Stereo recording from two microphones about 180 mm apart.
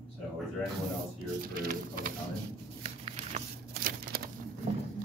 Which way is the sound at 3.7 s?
60° right (ahead or behind).